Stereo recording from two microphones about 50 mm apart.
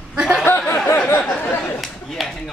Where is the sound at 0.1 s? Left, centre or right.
Centre.